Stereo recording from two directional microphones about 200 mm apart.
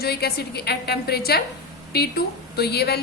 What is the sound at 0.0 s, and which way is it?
A man's voice, 50° left (ahead or behind).